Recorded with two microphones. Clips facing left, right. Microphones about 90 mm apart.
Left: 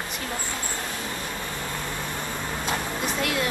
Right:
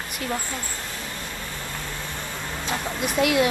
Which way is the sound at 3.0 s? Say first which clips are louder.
Right 8 dB; 10° right (ahead or behind).